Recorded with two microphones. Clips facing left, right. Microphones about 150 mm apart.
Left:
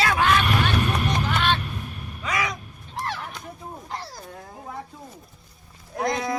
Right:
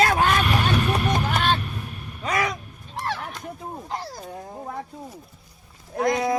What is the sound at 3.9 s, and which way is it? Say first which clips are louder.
Speech: right 3 dB; 20° right (ahead or behind).